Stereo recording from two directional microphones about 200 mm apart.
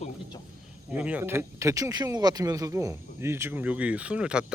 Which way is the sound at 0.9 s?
5° right (ahead or behind).